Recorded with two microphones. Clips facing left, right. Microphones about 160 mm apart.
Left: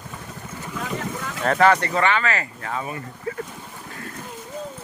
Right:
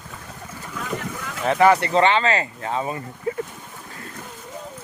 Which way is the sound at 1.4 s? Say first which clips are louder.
Right 1 dB; 15° right (ahead or behind).